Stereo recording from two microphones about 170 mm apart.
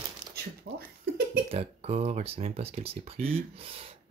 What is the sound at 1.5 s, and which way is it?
Speech, 40° right (ahead or behind).